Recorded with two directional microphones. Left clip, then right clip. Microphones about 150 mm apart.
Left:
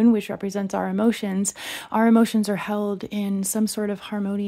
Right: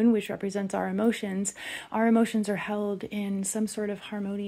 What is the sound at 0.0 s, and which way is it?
Speech, 35° left (ahead or behind).